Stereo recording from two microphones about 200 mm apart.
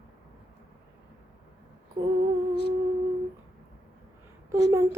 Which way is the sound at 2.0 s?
20° right (ahead or behind).